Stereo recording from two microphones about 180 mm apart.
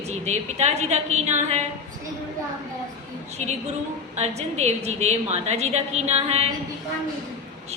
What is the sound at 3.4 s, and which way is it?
A woman's voice, 40° right (ahead or behind).